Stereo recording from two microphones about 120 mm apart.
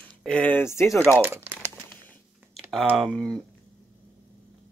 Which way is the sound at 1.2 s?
20° right (ahead or behind).